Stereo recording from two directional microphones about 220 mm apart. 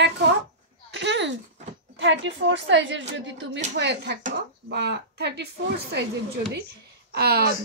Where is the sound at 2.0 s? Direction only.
55° right (ahead or behind).